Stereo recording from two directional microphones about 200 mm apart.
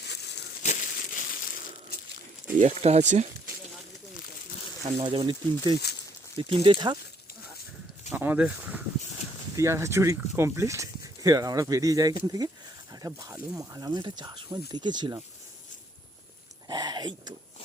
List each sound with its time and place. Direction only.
0.0 s a sound: 55° left (ahead or behind)
0.6 s crumpling: 40° left (ahead or behind)
2.6 s speech: 35° right (ahead or behind)
4.9 s speech: 25° right (ahead or behind)
8.1 s speech: 10° right (ahead or behind)
16.6 s a sound: 20° right (ahead or behind)